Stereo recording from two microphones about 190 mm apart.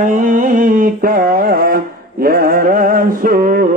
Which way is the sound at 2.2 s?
50° right (ahead or behind).